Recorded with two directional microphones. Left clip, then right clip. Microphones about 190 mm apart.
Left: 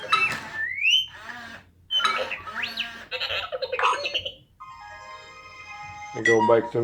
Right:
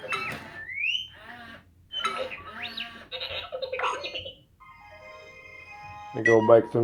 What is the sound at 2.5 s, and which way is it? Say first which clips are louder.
Bird: left 6 dB; 20° left (ahead or behind).